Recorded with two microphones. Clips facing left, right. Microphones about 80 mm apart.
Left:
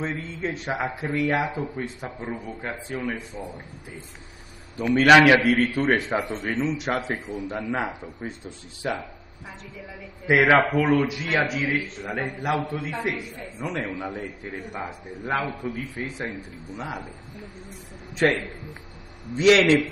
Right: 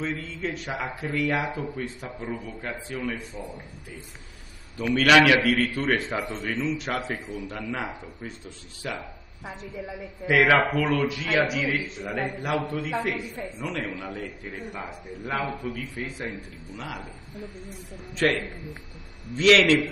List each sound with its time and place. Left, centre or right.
0.0 s a man's voice: left
9.5 s a woman's voice: right
10.2 s a man's voice: left
18.1 s a man's voice: centre